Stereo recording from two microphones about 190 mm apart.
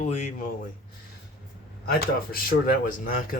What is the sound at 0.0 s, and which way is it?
Speech, 40° left (ahead or behind).